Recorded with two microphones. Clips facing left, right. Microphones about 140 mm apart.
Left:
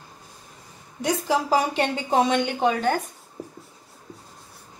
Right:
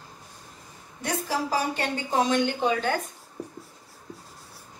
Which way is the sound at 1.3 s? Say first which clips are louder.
Left 5 dB; 90° left.